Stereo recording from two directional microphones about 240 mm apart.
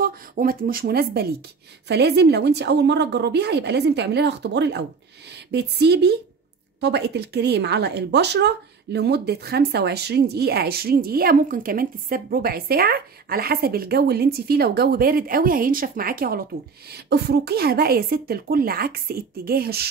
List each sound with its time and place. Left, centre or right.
0.0 s a woman's voice: right